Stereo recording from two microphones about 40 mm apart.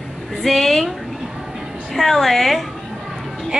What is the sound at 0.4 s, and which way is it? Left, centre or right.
Speech, centre.